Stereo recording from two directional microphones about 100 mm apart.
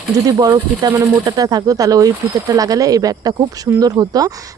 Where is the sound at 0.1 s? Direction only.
40° right (ahead or behind).